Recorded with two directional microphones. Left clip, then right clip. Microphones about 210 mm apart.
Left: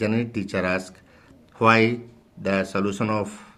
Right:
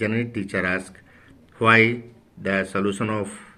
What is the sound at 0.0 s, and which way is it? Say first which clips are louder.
A man's voice: even; 40° left (ahead or behind).